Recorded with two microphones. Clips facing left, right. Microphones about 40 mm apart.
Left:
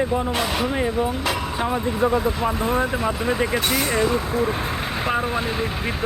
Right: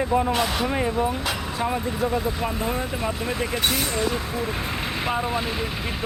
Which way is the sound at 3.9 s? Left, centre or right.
Left.